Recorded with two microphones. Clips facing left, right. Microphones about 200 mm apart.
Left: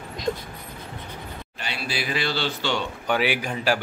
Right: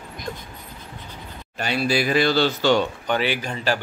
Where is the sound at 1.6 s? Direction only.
45° right (ahead or behind).